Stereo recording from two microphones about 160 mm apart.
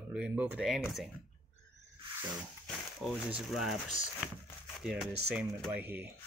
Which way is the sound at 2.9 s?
Centre (ahead or behind).